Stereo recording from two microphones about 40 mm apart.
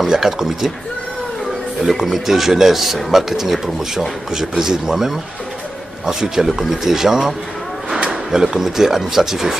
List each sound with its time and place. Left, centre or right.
0.0 s speech: centre
1.9 s speech: centre